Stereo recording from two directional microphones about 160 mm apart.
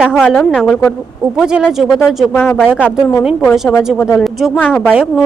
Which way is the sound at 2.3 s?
10° left (ahead or behind).